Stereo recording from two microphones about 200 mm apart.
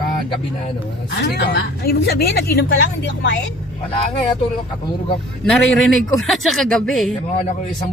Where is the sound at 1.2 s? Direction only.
60° left (ahead or behind).